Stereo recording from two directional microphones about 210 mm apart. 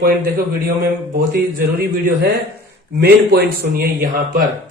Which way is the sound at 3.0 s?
45° right (ahead or behind).